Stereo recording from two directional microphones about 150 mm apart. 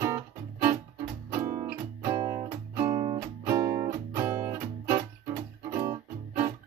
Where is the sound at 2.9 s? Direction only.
40° right (ahead or behind).